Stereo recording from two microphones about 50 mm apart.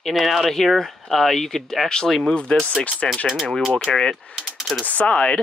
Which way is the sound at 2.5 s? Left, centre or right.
Left.